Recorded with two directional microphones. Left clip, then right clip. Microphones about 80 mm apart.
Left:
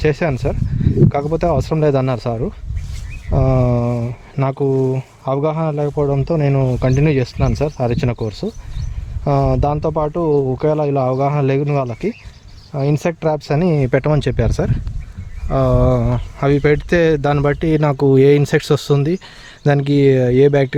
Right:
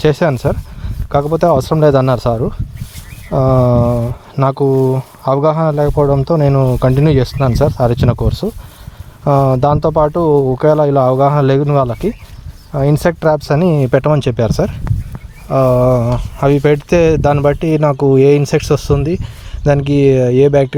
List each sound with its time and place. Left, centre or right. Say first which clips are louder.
0.0 s speech: right 5 dB; right
1.3 s speech: right 6 dB; right
4.5 s speech: right 2 dB; right
6.3 s speech: right 5 dB; right
6.7 s speech: right 4 dB; right; by 17.7 s centre
17.7 s speech: right 1 dB; centre
18.9 s speech: right 2 dB; centre
19.6 s speech: right 3 dB; centre